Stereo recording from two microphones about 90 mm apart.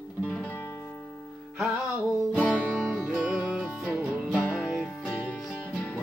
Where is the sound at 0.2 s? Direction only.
15° left (ahead or behind).